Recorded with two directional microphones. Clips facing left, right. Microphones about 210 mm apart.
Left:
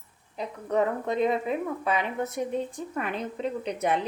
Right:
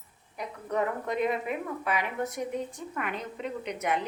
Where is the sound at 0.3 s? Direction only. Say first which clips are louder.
Left 4 dB; 25° left (ahead or behind).